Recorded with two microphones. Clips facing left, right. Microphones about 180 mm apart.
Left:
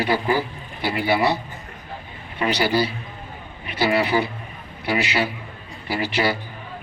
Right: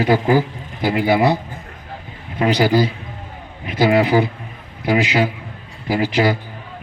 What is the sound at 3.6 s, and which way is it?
Speech, 90° right.